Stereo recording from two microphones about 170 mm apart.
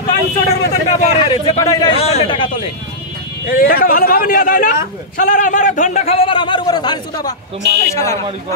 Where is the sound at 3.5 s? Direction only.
60° left (ahead or behind).